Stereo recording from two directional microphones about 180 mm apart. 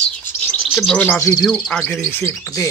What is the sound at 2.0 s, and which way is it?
Speech, 15° left (ahead or behind).